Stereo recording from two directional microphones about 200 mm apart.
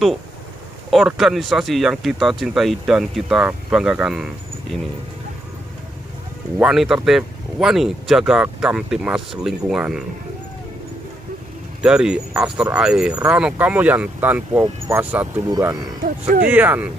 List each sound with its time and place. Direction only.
0.8 s speech: centre (ahead or behind)
6.6 s speech: centre (ahead or behind)
11.8 s speech: 5° right (ahead or behind)
15.4 s speech: 20° right (ahead or behind)
16.0 s music: 45° right (ahead or behind)
16.4 s speech: 10° right (ahead or behind)